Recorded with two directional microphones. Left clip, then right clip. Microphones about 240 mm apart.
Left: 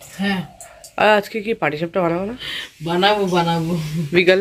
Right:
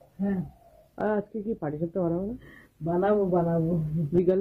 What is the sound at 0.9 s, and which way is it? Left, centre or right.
Speech, centre.